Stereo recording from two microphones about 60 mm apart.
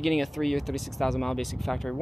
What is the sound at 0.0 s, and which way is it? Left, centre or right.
Speech, centre.